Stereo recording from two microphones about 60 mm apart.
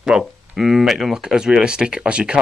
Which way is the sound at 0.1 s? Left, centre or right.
Centre.